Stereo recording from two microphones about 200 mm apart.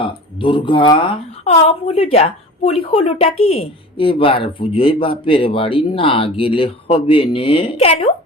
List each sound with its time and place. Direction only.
0.0 s speech: 25° left (ahead or behind)